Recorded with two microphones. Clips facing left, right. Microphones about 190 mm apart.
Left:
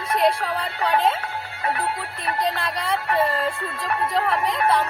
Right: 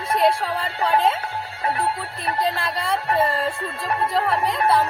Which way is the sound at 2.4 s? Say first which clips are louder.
Right 1 dB; centre (ahead or behind).